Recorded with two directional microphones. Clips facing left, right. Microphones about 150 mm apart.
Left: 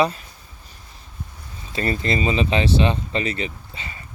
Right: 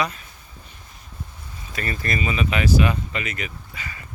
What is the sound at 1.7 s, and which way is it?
Speech, 25° left (ahead or behind).